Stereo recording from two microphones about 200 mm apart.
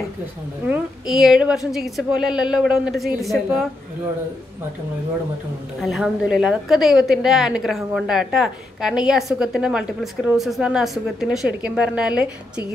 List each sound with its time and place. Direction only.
0.7 s a woman's voice: 5° right (ahead or behind)
5.8 s a woman's voice: centre (ahead or behind)